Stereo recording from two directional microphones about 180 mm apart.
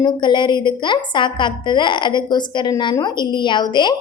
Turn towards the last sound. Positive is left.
turn(degrees=25)  # may be behind; listen again after turning